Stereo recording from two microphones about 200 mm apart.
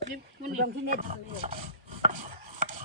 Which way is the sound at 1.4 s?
35° right (ahead or behind).